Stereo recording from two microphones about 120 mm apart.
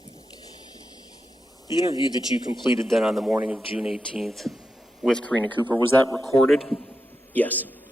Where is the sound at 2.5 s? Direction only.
40° left (ahead or behind).